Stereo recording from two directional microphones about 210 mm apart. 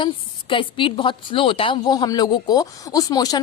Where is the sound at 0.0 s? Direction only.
25° left (ahead or behind).